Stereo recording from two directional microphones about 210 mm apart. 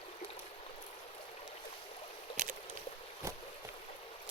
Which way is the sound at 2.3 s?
40° right (ahead or behind).